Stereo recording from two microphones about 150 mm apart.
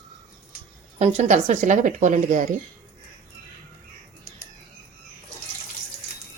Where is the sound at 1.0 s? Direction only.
50° right (ahead or behind).